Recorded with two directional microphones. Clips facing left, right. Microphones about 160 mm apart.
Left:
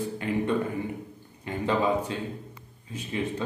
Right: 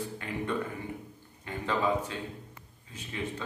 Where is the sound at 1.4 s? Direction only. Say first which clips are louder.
Left 4 dB; 20° left (ahead or behind).